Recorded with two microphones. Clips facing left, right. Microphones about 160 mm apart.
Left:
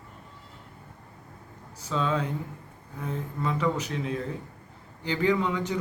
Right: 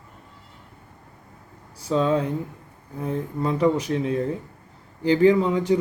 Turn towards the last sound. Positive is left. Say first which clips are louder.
# right 7 dB
turn(degrees=-35)  # may be behind; listen again after turning